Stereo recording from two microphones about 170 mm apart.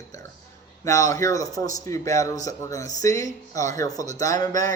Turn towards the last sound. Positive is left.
turn(degrees=20)  # may be behind; listen again after turning